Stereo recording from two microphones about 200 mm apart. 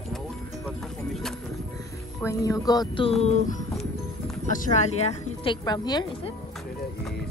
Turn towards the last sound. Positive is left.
turn(degrees=20)  # may be behind; listen again after turning